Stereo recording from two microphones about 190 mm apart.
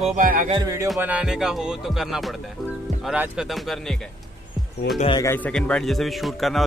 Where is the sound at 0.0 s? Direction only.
40° right (ahead or behind).